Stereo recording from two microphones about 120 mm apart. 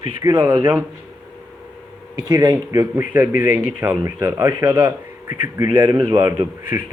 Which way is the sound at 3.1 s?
15° right (ahead or behind).